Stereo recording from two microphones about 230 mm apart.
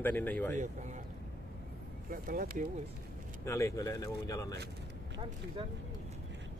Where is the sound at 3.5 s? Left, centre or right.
Centre.